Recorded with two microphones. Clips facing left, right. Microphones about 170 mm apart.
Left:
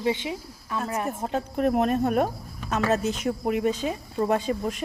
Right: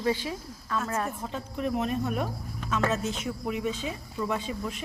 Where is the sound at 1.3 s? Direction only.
60° left (ahead or behind).